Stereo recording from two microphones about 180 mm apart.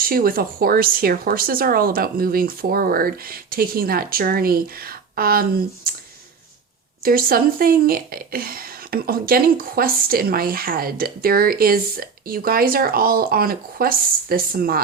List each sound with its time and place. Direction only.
0.0 s speech: 55° right (ahead or behind)
7.0 s speech: 55° right (ahead or behind)